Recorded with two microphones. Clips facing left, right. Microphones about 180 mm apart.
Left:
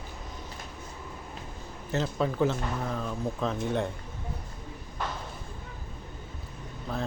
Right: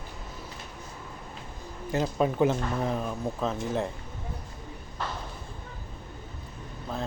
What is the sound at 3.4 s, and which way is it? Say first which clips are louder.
Speech: even; centre (ahead or behind).